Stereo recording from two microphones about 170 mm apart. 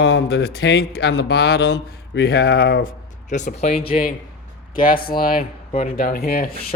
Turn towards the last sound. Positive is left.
turn(degrees=60)  # may be behind; listen again after turning